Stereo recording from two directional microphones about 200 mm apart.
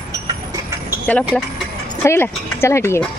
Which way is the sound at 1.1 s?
5° left (ahead or behind).